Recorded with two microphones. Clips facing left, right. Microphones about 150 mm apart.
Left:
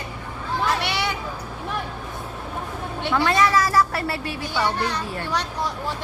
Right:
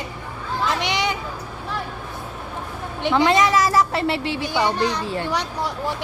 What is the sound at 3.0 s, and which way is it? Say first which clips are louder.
A woman's voice: right 3 dB; 20° right (ahead or behind).